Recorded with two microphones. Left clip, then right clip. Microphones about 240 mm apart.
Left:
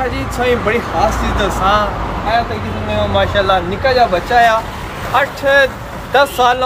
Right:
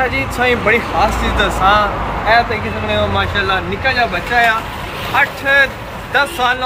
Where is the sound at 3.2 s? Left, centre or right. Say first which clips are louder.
Left 3 dB; centre.